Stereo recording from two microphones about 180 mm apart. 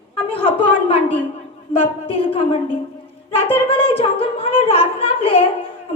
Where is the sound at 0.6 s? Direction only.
30° left (ahead or behind).